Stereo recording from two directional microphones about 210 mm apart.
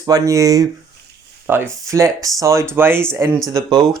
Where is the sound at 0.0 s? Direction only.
15° right (ahead or behind).